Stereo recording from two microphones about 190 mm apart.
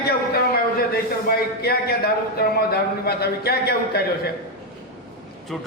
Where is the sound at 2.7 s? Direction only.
55° left (ahead or behind).